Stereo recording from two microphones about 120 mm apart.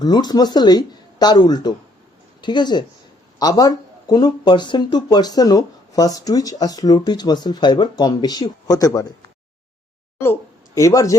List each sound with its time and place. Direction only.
0.0 s speech: 35° left (ahead or behind)
10.8 s speech: 25° left (ahead or behind)